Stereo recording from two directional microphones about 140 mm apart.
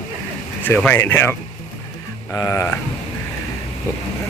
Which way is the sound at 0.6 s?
10° left (ahead or behind).